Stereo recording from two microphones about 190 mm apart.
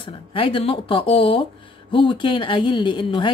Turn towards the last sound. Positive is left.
turn(degrees=25)  # may be behind; listen again after turning